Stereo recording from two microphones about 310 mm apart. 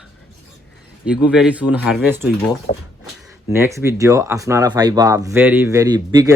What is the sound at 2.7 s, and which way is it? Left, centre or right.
Speech, centre.